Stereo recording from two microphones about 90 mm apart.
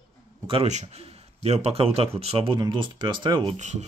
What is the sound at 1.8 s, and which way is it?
Speech, 90° right.